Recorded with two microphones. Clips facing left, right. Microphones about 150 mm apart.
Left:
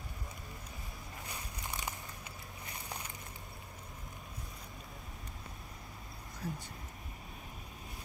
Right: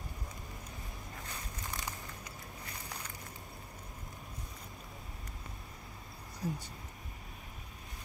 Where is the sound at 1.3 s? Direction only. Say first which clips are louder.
Left 1 dB; 20° left (ahead or behind).